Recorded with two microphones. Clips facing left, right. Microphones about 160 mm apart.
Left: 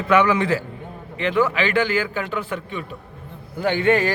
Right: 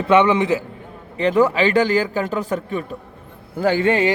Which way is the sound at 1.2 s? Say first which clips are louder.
Right 4 dB; 35° right (ahead or behind).